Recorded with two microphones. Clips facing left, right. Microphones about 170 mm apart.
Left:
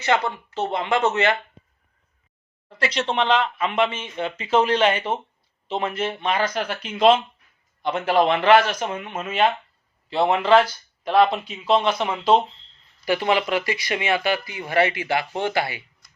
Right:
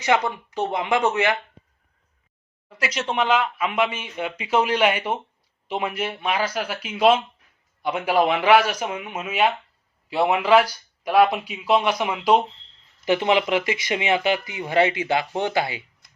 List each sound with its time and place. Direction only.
0.0 s speech: 15° right (ahead or behind)
2.6 s speech: 5° right (ahead or behind)